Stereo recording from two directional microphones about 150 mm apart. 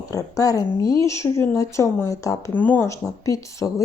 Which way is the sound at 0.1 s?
25° left (ahead or behind).